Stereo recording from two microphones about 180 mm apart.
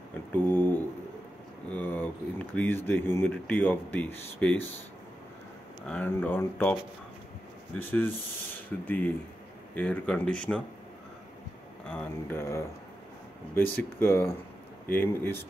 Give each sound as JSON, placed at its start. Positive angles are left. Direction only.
{"t": 0.4, "sound": "a sound", "side_deg": 10}
{"t": 1.7, "sound": "speech", "side_deg": 10}
{"t": 5.9, "sound": "speech", "side_deg": 10}
{"t": 8.5, "sound": "speech", "side_deg": 10}
{"t": 11.9, "sound": "speech", "side_deg": 10}